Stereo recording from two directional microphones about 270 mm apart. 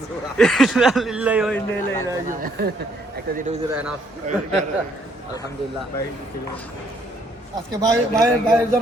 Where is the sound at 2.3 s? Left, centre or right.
Right.